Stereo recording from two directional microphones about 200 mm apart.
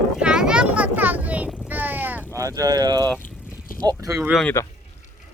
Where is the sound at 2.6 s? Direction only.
20° right (ahead or behind).